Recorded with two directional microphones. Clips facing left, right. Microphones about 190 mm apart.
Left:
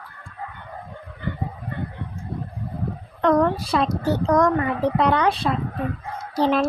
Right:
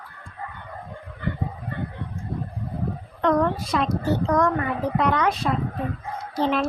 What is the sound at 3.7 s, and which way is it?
Speech, 35° left (ahead or behind).